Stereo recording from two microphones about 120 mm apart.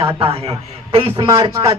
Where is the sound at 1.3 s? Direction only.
30° right (ahead or behind).